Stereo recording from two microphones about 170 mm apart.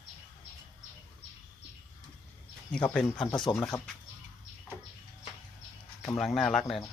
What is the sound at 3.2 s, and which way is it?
Speech, 25° left (ahead or behind).